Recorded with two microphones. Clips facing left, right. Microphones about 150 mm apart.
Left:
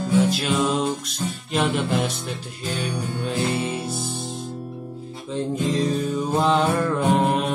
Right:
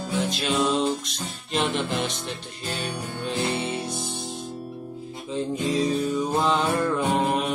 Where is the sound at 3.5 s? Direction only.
Centre (ahead or behind).